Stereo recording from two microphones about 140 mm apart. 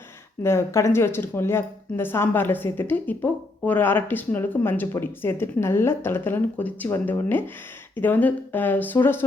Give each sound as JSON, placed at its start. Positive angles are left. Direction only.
{"t": 0.4, "sound": "a woman's voice", "side_deg": 20}